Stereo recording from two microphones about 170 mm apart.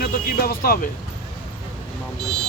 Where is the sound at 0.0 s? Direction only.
60° left (ahead or behind).